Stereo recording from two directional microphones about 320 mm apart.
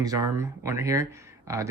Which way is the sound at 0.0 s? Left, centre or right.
Centre.